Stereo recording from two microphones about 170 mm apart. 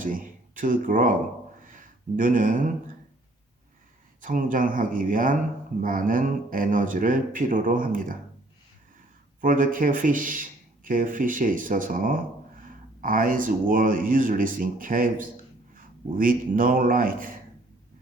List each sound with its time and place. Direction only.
0.0 s speech: 50° right (ahead or behind)
4.2 s speech: 50° right (ahead or behind)
9.4 s a man's voice: 55° right (ahead or behind)